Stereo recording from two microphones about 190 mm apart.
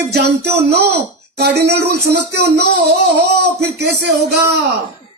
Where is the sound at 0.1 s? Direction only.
60° right (ahead or behind).